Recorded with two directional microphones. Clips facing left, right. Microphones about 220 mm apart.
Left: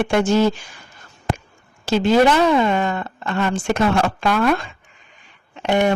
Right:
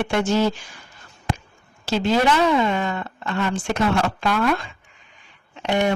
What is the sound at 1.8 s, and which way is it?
Speech, 50° left (ahead or behind).